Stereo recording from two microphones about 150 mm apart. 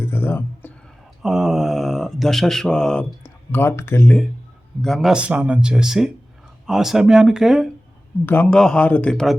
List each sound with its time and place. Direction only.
0.0 s a sound: 15° left (ahead or behind)
1.2 s speech: 5° right (ahead or behind); by 4.2 s 15° left (ahead or behind)
4.8 s speech: centre (ahead or behind)
8.3 s speech: 10° left (ahead or behind)